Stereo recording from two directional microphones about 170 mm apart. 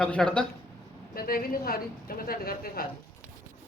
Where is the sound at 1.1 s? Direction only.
60° left (ahead or behind).